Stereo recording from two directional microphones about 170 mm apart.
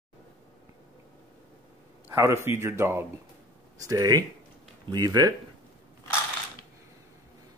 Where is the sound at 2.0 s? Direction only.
15° right (ahead or behind).